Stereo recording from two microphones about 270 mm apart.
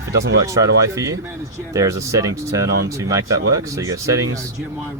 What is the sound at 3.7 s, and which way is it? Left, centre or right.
Speech, centre.